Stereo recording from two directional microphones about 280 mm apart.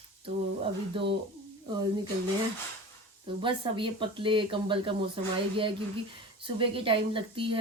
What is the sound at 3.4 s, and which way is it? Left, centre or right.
Speech, centre.